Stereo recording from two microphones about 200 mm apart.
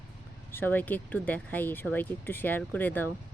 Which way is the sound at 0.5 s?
10° left (ahead or behind).